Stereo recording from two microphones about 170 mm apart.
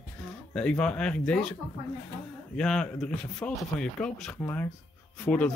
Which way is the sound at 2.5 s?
5° left (ahead or behind).